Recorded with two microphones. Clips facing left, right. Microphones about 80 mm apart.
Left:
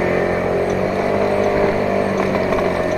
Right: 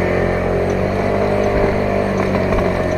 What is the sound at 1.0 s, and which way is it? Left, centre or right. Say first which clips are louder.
Vehicle: even; right.